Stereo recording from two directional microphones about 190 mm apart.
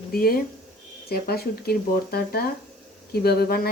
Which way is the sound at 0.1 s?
50° left (ahead or behind).